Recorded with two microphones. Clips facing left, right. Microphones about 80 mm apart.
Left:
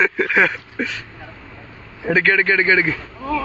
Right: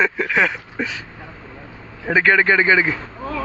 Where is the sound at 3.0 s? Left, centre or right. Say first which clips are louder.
Left 4 dB; right.